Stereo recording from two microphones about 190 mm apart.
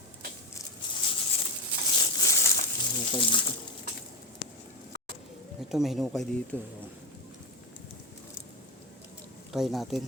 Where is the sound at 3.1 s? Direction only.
25° left (ahead or behind).